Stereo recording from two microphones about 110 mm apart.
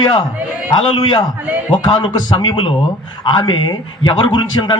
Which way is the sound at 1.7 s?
45° left (ahead or behind).